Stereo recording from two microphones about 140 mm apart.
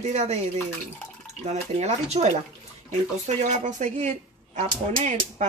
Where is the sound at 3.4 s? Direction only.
55° right (ahead or behind).